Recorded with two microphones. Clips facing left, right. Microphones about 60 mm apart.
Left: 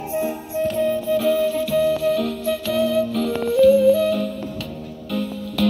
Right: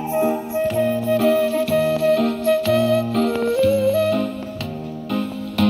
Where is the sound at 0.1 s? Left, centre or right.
Right.